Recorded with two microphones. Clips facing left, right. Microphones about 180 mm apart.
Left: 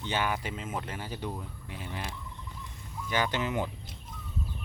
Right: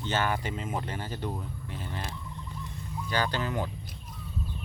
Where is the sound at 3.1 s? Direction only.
20° left (ahead or behind).